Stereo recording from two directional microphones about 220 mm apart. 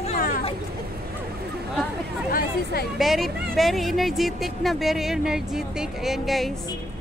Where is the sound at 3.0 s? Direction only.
Centre (ahead or behind).